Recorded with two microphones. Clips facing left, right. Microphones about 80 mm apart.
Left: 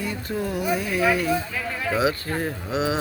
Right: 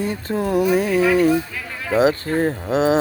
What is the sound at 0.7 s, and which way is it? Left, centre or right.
Speech, right.